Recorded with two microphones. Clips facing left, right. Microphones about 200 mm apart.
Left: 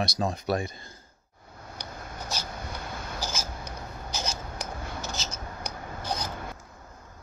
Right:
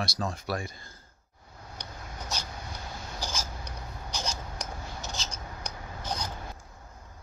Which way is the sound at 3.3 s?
5° left (ahead or behind).